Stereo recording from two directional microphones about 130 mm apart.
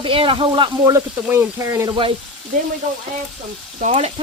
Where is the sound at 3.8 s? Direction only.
70° right (ahead or behind).